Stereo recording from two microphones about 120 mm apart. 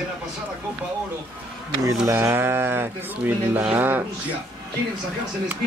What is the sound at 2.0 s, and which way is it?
Speech, 20° right (ahead or behind).